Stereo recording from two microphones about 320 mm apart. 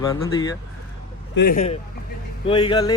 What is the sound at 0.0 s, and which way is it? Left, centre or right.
Speech, centre.